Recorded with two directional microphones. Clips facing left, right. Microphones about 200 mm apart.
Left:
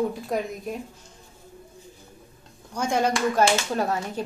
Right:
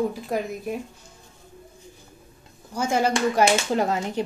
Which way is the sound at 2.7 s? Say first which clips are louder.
Right 1 dB; 5° right (ahead or behind).